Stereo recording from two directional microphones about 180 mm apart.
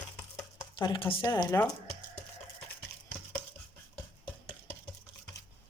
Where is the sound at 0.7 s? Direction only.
30° left (ahead or behind).